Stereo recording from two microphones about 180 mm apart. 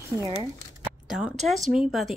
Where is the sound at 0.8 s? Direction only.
5° right (ahead or behind).